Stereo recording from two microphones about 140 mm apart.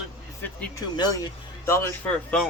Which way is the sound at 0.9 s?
30° left (ahead or behind).